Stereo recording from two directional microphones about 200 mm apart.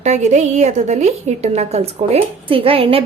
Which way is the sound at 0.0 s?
35° right (ahead or behind).